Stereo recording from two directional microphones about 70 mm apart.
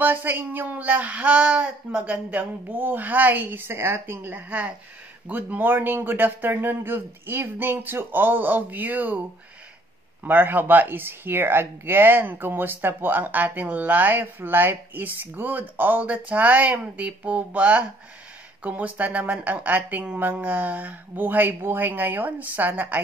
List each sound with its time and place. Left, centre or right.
0.0 s speech: right
10.2 s speech: right